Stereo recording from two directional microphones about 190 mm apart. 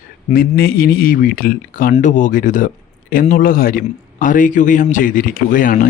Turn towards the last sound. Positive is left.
turn(degrees=45)  # may be behind; listen again after turning